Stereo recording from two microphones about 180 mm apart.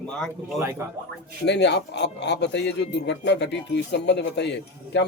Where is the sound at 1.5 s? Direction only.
70° left (ahead or behind).